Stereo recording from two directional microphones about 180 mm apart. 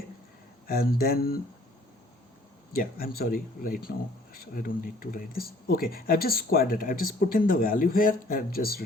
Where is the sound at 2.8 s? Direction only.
55° left (ahead or behind).